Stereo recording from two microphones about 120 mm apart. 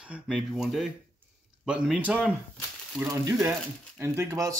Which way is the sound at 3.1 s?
25° right (ahead or behind).